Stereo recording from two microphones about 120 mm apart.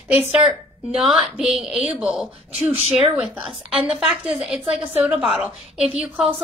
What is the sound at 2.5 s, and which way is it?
Speech, 55° right (ahead or behind).